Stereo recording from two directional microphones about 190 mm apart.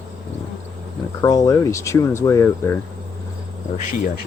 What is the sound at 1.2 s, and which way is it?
Speech, 20° left (ahead or behind).